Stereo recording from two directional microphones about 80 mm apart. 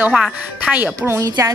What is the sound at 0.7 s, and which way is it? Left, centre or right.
Speech, right.